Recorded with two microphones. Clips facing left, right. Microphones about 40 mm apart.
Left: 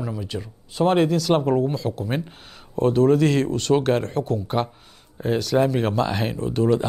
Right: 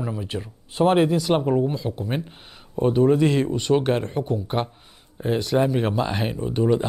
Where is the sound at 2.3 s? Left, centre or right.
Centre.